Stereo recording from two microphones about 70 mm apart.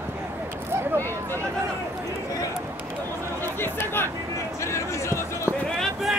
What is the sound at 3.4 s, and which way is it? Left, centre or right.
Chatter, left.